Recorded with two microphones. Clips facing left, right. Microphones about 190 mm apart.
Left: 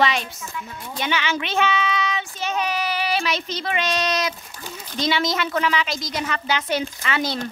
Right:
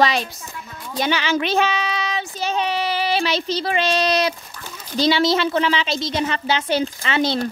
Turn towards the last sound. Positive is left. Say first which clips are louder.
# right 4 dB
turn(degrees=-30)  # may be behind; listen again after turning